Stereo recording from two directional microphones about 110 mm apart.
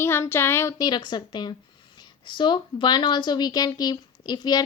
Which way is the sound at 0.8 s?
40° left (ahead or behind).